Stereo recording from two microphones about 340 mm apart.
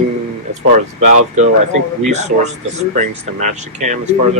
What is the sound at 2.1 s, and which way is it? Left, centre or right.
Speech, centre.